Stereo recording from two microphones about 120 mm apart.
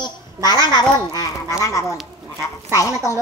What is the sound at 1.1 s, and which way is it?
A child's voice, 30° left (ahead or behind).